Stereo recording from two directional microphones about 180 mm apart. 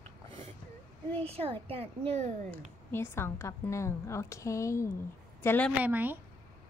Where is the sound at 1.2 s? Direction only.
35° right (ahead or behind).